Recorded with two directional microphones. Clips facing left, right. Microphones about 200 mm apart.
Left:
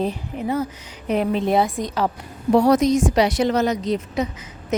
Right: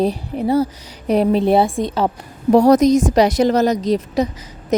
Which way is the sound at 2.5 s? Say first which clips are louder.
Right 5 dB; 40° right (ahead or behind).